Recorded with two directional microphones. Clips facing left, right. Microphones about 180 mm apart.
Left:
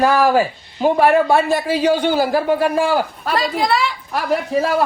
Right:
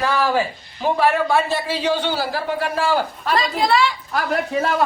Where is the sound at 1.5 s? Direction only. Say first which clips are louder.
Left 5 dB; 10° left (ahead or behind).